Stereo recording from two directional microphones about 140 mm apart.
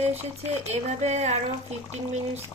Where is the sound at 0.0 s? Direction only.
50° right (ahead or behind).